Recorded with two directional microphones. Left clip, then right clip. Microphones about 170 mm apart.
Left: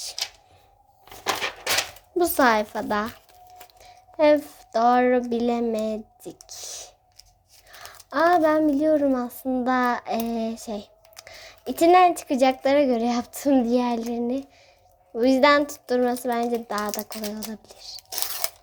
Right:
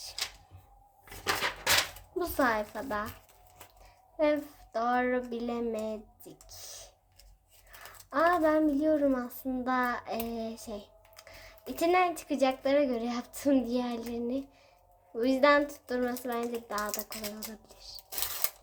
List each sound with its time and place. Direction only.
2.1 s a woman's voice: 35° left (ahead or behind)
17.1 s speech: 5° left (ahead or behind)
17.5 s speech: 30° left (ahead or behind)